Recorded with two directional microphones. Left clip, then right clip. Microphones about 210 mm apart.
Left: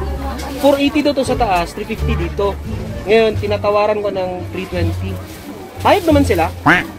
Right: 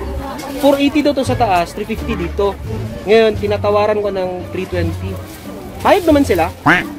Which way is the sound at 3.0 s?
5° right (ahead or behind).